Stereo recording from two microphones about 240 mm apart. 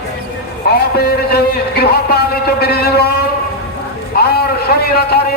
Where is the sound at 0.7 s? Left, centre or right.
Left.